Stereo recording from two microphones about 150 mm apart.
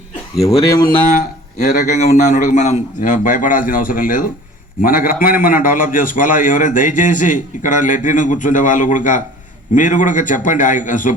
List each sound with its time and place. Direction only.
0.4 s speech: 20° left (ahead or behind)
1.9 s a man's voice: 50° left (ahead or behind)